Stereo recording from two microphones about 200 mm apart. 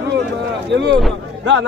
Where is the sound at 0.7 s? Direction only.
60° right (ahead or behind).